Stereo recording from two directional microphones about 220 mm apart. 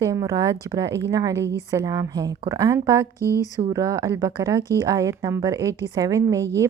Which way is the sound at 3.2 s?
15° left (ahead or behind).